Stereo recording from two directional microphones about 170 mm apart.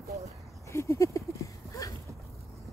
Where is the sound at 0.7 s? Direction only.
15° left (ahead or behind).